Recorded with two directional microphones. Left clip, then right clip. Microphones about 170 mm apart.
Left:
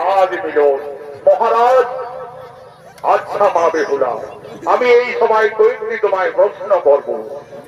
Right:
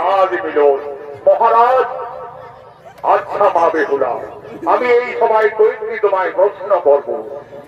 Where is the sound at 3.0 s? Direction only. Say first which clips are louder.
Even; 5° left (ahead or behind).